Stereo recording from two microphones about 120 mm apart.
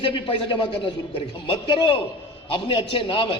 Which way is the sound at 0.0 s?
50° left (ahead or behind).